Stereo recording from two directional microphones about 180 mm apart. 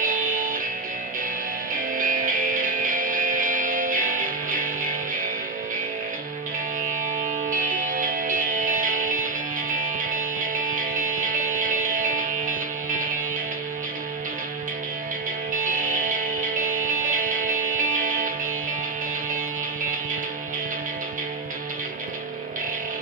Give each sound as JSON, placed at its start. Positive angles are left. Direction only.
{"t": 0.0, "sound": "music", "side_deg": -50}
{"t": 2.0, "sound": "music", "side_deg": -50}
{"t": 7.4, "sound": "music", "side_deg": -50}
{"t": 15.5, "sound": "music", "side_deg": -50}